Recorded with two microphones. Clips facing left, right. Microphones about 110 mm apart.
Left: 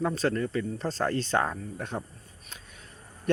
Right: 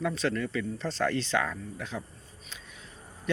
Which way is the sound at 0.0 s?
40° left (ahead or behind).